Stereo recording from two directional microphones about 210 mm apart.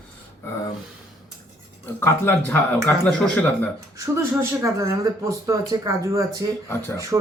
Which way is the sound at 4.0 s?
15° right (ahead or behind).